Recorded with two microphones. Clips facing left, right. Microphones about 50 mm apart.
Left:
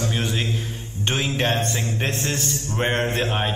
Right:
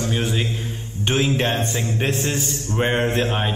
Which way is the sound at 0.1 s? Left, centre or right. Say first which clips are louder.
Right 2 dB; centre.